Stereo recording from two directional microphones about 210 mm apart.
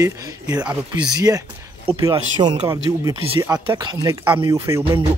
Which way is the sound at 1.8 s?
20° right (ahead or behind).